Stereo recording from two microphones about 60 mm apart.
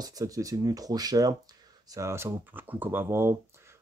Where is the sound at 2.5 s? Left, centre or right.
Right.